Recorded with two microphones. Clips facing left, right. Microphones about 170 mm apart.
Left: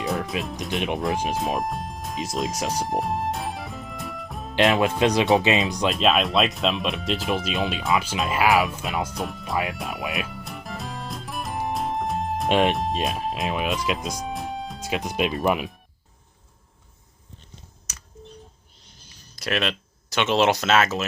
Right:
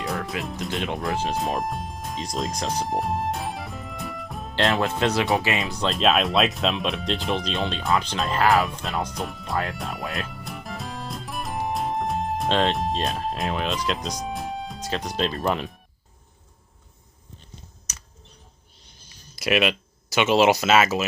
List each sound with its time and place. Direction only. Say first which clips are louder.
0.4 s speech: right 1 dB; centre (ahead or behind)
0.7 s speech: left 3 dB; 20° left (ahead or behind)
1.4 s music: even; centre (ahead or behind)
4.5 s speech: left 3 dB; 20° left (ahead or behind)
5.9 s speech: right 2 dB; centre (ahead or behind)
12.5 s speech: left 2 dB; 15° left (ahead or behind)
12.7 s speech: even; centre (ahead or behind)
14.8 s speech: left 2 dB; 10° left (ahead or behind)
19.4 s speech: right 4 dB; 10° right (ahead or behind)